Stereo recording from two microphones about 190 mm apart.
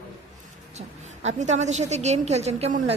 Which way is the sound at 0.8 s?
35° right (ahead or behind).